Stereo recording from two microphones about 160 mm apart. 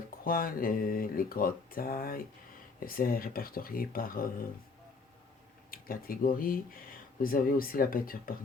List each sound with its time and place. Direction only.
0.3 s speech: 65° left (ahead or behind)
5.7 s speech: 65° left (ahead or behind)